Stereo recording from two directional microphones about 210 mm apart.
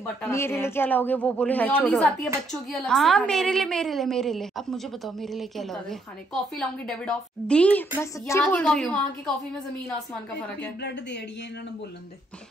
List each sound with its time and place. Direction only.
0.0 s a woman's voice: 10° left (ahead or behind)
10.8 s speech: 50° left (ahead or behind)